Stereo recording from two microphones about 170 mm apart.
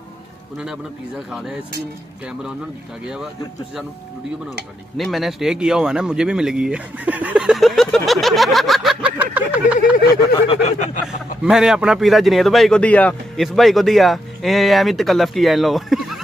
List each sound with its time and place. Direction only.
1.3 s a man's voice: centre (ahead or behind)
4.9 s speech: centre (ahead or behind)
10.5 s a sound: 40° left (ahead or behind)
11.1 s a man's voice: 5° right (ahead or behind)